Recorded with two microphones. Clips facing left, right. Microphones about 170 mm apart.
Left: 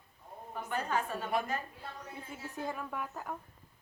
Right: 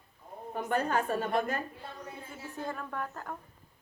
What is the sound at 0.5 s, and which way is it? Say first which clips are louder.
Speech: right 5 dB; 55° right (ahead or behind).